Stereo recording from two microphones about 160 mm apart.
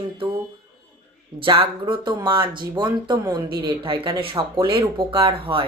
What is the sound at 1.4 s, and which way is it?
Speech, 35° right (ahead or behind).